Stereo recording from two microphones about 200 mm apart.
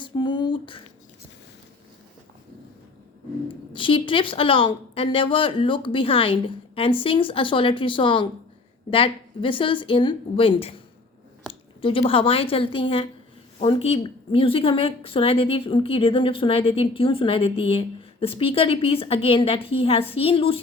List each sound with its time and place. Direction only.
0.0 s a sound: 20° left (ahead or behind)
3.7 s a woman's voice: 25° left (ahead or behind)
11.8 s a woman's voice: 25° left (ahead or behind)